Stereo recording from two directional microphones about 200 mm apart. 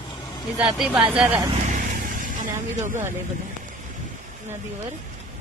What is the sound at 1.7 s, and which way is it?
Vehicle, 40° right (ahead or behind).